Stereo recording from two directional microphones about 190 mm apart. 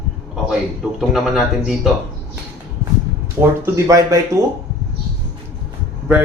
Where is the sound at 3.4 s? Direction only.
15° right (ahead or behind).